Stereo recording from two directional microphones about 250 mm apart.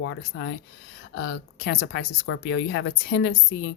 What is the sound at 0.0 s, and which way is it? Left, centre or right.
Speech, left.